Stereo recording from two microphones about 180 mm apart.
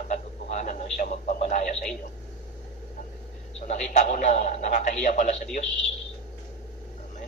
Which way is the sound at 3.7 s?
40° left (ahead or behind).